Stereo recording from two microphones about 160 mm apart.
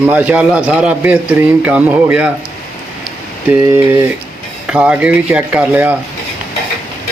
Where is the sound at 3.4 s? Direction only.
10° right (ahead or behind).